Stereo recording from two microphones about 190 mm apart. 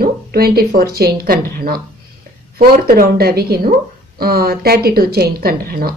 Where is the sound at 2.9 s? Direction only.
55° right (ahead or behind).